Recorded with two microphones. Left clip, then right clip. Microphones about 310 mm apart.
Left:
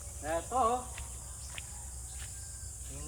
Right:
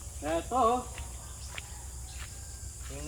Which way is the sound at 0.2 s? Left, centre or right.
Right.